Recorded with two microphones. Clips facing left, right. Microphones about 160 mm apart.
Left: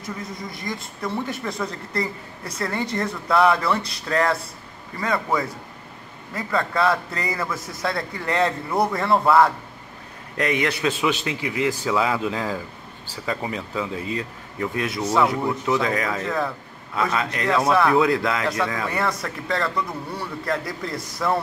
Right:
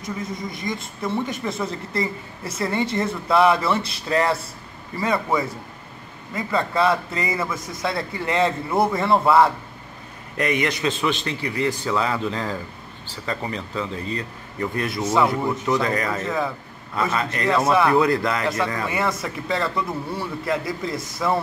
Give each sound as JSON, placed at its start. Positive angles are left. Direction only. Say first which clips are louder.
{"t": 0.0, "sound": "speech", "louder": "right 3 dB", "side_deg": 0}